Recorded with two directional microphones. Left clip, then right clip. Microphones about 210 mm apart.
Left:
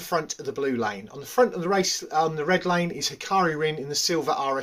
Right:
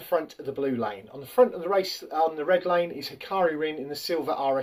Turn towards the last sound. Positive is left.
turn(degrees=40)  # may be behind; listen again after turning